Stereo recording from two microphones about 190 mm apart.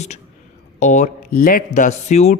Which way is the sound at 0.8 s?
40° left (ahead or behind).